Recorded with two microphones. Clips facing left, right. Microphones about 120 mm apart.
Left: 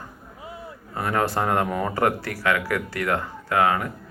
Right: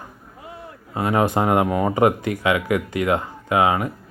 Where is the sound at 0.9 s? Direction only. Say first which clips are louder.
Right 4 dB; 15° right (ahead or behind).